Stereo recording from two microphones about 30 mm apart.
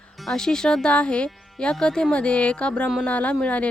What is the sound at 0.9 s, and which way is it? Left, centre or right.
Speech, left.